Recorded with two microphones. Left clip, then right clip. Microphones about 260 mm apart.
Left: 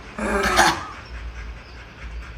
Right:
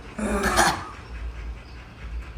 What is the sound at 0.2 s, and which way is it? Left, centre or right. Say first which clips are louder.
Dog: left 4 dB; centre.